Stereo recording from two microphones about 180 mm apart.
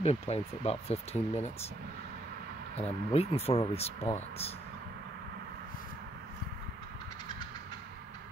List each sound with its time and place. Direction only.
0.0 s speech: 35° left (ahead or behind)
2.8 s speech: 35° left (ahead or behind)